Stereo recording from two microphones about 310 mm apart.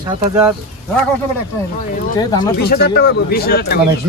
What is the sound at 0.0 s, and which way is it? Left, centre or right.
Speech, centre.